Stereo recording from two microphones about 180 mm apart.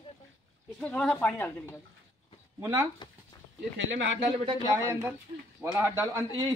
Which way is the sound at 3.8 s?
90° right.